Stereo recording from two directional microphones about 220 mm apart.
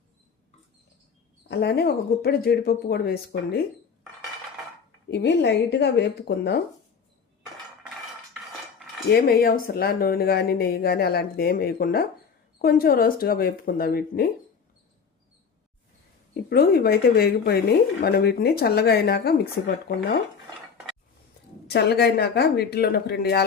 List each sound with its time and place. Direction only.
1.5 s speech: 45° left (ahead or behind)
5.1 s speech: 50° left (ahead or behind)
9.0 s speech: 45° left (ahead or behind)
16.3 s speech: 45° left (ahead or behind)
21.7 s speech: 50° left (ahead or behind)